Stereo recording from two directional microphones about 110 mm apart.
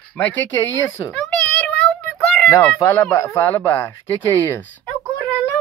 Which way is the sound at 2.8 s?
25° left (ahead or behind).